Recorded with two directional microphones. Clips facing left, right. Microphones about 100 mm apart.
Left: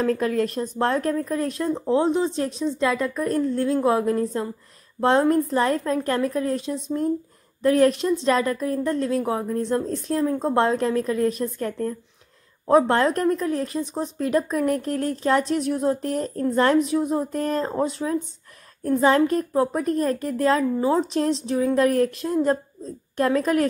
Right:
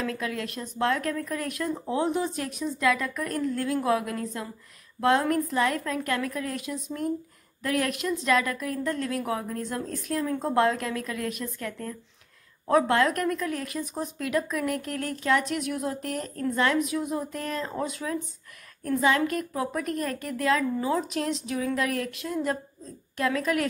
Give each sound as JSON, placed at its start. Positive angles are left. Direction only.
{"t": 0.0, "sound": "speech", "side_deg": 40}